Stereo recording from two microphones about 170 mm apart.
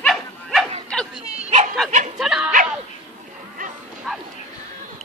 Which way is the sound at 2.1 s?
5° right (ahead or behind).